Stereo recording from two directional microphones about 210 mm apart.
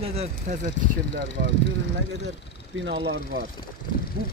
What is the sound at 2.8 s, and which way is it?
Speech, 55° right (ahead or behind).